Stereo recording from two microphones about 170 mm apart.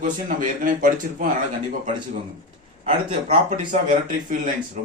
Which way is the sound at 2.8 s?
35° right (ahead or behind).